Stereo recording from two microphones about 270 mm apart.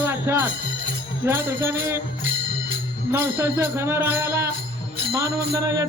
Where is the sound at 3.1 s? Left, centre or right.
Centre.